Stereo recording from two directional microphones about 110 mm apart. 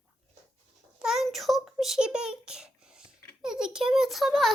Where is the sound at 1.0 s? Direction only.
5° right (ahead or behind).